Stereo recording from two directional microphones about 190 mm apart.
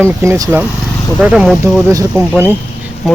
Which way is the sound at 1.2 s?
5° right (ahead or behind).